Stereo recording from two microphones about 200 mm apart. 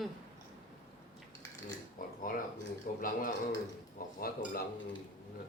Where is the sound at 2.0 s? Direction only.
45° left (ahead or behind).